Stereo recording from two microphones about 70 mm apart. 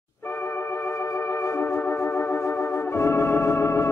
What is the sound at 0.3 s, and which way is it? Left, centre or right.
Music, left.